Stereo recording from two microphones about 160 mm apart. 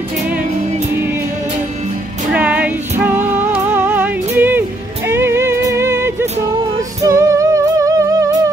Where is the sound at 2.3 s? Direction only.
10° right (ahead or behind).